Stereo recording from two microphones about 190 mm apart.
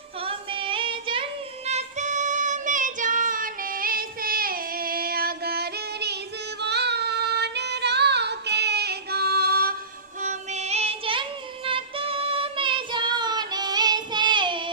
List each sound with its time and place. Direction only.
0.2 s child singing: 30° right (ahead or behind)
1.6 s music: 35° right (ahead or behind); by 6.1 s 60° right (ahead or behind)
6.6 s child singing: 60° right (ahead or behind)
10.2 s child singing: 40° right (ahead or behind)